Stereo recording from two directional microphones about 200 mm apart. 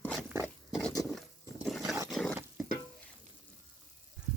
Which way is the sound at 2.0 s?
5° left (ahead or behind).